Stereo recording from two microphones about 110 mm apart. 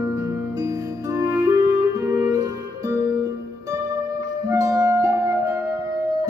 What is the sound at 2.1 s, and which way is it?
Music, 30° right (ahead or behind).